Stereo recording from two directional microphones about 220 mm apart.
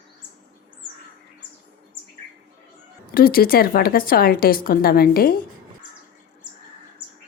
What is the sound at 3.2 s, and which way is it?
A woman's voice, 40° left (ahead or behind).